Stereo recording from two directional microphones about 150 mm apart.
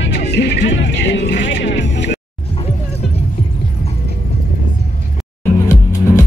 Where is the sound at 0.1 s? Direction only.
90° left.